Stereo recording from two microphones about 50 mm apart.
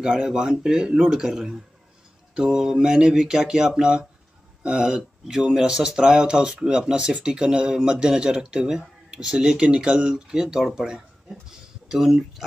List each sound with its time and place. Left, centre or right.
0.0 s speech: centre
11.9 s speech: centre